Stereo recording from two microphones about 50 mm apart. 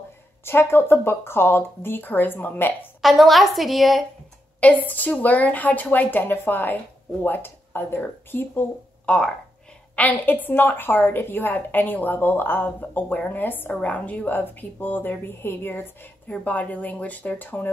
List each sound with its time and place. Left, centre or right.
0.5 s speech: left
3.0 s a woman's voice: centre
4.8 s speech: left
9.0 s speech: left
9.9 s speech: left
16.3 s speech: left